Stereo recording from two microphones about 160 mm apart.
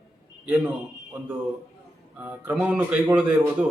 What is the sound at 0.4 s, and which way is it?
Speech, 10° right (ahead or behind).